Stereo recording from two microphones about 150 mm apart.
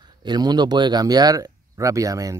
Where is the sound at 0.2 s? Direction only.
30° right (ahead or behind).